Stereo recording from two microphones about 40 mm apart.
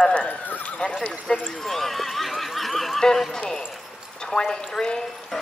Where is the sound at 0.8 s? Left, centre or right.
Left.